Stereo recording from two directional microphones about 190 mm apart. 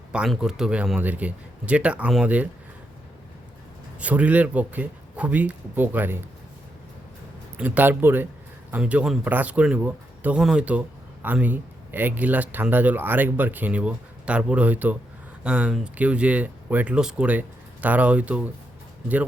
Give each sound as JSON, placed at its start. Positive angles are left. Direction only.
{"t": 0.1, "sound": "a man's voice", "side_deg": -5}
{"t": 4.0, "sound": "speech", "side_deg": -5}
{"t": 7.5, "sound": "speech", "side_deg": -10}